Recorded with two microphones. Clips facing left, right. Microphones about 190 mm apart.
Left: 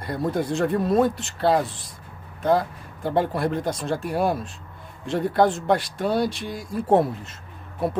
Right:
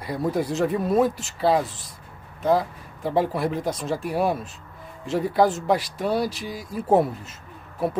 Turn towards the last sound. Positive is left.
turn(degrees=-5)  # may be behind; listen again after turning